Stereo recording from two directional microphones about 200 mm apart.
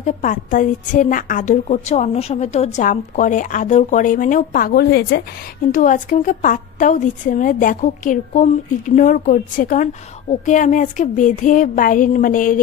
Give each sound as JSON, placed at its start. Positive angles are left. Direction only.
{"t": 0.0, "sound": "a woman's voice", "side_deg": 40}
{"t": 5.7, "sound": "a woman's voice", "side_deg": 40}